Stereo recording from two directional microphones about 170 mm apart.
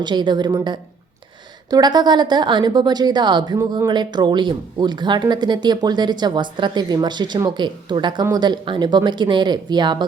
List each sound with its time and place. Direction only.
0.0 s speech: 25° right (ahead or behind)